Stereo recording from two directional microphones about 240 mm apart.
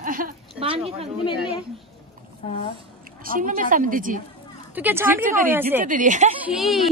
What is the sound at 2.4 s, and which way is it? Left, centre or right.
Speech, left.